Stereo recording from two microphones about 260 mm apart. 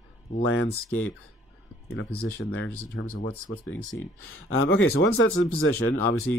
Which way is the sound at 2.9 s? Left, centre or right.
Left.